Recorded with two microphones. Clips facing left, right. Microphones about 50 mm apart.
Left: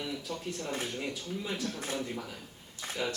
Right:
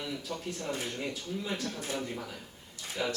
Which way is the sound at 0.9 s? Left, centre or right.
Centre.